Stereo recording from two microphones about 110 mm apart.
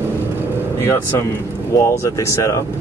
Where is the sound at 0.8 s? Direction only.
30° left (ahead or behind).